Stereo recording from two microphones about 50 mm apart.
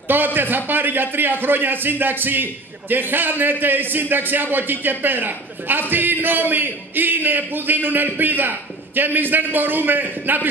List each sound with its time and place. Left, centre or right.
0.1 s a man's voice: right